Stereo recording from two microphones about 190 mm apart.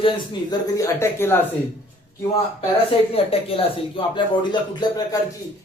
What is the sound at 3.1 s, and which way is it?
A man's voice, 30° left (ahead or behind).